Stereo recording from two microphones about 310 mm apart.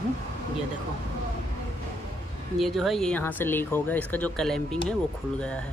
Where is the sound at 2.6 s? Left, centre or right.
Centre.